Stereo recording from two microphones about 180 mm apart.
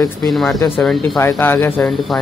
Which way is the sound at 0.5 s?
15° left (ahead or behind).